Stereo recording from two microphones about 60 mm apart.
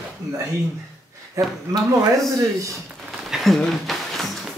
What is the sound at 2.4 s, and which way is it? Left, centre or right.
Speech, right.